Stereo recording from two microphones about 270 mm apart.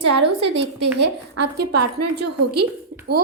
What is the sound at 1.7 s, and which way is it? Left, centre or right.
Speech, right.